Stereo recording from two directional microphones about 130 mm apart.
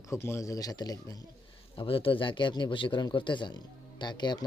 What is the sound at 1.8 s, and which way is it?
Speech, 45° left (ahead or behind).